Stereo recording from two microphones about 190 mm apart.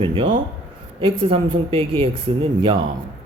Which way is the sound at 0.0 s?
30° right (ahead or behind).